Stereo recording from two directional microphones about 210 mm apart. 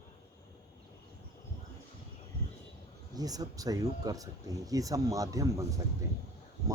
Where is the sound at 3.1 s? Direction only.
15° right (ahead or behind).